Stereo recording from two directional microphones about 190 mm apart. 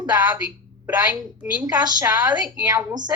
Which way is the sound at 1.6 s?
20° right (ahead or behind).